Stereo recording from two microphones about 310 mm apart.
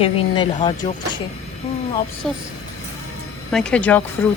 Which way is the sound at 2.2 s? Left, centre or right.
Centre.